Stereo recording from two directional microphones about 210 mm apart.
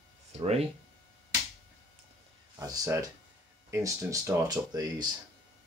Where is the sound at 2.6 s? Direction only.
15° right (ahead or behind).